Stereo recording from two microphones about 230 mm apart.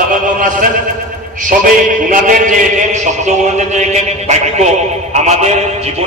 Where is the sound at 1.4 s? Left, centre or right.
Right.